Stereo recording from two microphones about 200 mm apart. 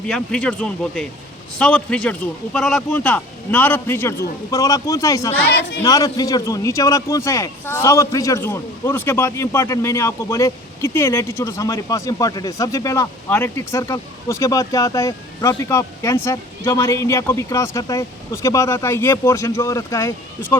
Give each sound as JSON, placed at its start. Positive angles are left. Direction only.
{"t": 0.1, "sound": "a man's voice", "side_deg": 5}
{"t": 5.4, "sound": "speech", "side_deg": 55}
{"t": 5.8, "sound": "a man's voice", "side_deg": 15}